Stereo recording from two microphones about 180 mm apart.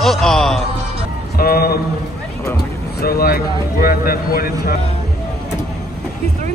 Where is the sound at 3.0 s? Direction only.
55° left (ahead or behind).